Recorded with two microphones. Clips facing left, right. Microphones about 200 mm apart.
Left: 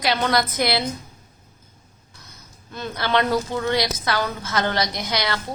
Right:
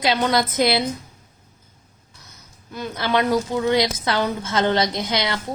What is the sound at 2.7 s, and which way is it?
A woman's voice, 10° right (ahead or behind).